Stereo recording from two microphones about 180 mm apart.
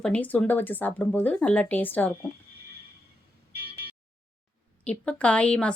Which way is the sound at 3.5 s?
60° right (ahead or behind).